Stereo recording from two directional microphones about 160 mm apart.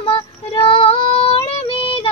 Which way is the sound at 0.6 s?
35° left (ahead or behind).